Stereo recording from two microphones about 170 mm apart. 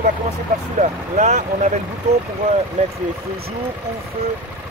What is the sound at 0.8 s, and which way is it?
Speech, 45° right (ahead or behind).